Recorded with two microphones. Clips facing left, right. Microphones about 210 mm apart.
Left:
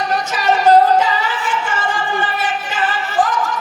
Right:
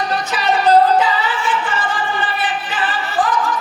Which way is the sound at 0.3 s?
45° left (ahead or behind).